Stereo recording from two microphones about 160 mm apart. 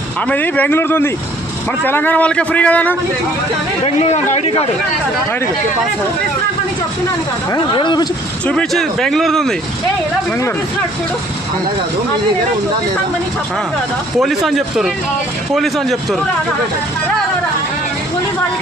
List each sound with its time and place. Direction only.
0.3 s a man's voice: 10° left (ahead or behind)
3.8 s a man's voice: 40° left (ahead or behind)
7.5 s speech: 30° left (ahead or behind)
8.5 s speech: 5° left (ahead or behind)
14.1 s speech: centre (ahead or behind)